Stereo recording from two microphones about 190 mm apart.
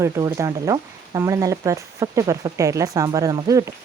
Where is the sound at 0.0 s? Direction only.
15° right (ahead or behind).